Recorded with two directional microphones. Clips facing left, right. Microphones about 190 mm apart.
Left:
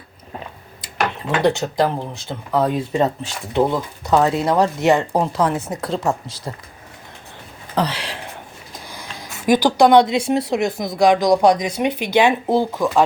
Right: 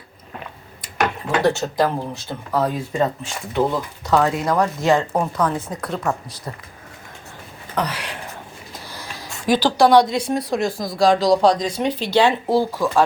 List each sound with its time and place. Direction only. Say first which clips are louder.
1.5 s speech: left 2 dB; 15° left (ahead or behind)
7.8 s speech: left 3 dB; 30° left (ahead or behind)
9.5 s speech: left 2 dB; 15° left (ahead or behind)